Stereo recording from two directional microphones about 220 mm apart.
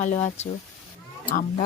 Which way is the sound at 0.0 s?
30° left (ahead or behind).